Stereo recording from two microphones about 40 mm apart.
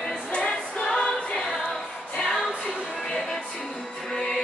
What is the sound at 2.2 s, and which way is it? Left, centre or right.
Music, centre.